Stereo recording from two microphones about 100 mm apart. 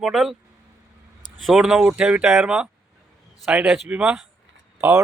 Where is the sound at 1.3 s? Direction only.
Centre (ahead or behind).